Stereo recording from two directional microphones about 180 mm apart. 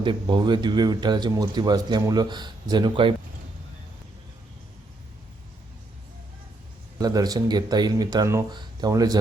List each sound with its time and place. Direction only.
0.0 s speech: 25° right (ahead or behind)
7.0 s speech: 20° right (ahead or behind)